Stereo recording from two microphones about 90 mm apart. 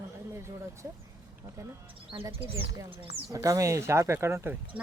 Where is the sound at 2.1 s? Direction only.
50° right (ahead or behind).